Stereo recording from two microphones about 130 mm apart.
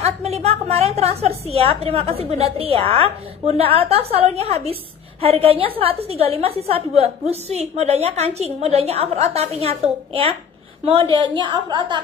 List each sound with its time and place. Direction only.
0.0 s a woman's voice: 55° right (ahead or behind)
11.1 s a woman's voice: 40° right (ahead or behind)